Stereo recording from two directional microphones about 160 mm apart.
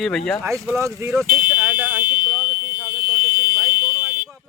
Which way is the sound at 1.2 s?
60° right (ahead or behind).